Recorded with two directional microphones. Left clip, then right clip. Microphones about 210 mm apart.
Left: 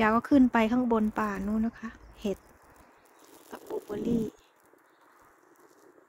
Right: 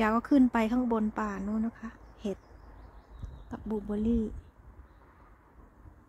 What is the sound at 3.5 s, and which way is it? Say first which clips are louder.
Speech: even; 5° left (ahead or behind).